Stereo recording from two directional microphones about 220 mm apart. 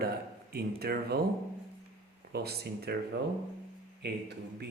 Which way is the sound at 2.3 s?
45° right (ahead or behind).